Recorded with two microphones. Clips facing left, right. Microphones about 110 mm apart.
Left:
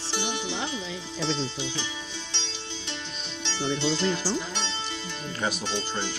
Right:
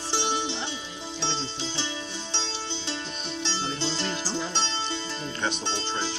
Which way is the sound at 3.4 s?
35° right (ahead or behind).